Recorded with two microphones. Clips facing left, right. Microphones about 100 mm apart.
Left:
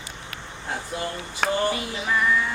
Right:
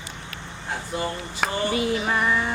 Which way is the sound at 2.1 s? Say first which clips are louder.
Left 5 dB; 40° right (ahead or behind).